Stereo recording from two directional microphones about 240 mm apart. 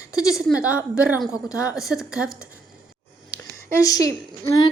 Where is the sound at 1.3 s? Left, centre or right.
Centre.